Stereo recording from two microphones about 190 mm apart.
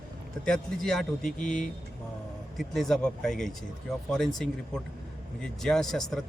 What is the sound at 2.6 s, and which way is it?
Speech, centre (ahead or behind).